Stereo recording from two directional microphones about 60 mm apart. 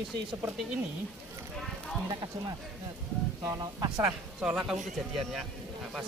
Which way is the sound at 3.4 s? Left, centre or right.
Right.